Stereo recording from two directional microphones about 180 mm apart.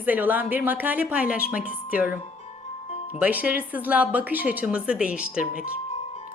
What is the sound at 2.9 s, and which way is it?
Music, 35° left (ahead or behind).